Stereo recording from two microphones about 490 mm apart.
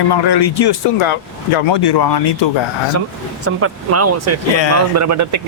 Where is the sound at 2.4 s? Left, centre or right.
Left.